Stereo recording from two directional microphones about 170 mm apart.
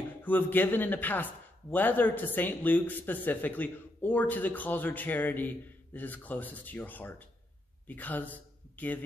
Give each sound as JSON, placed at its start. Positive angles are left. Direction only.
{"t": 0.2, "sound": "a man's voice", "side_deg": 10}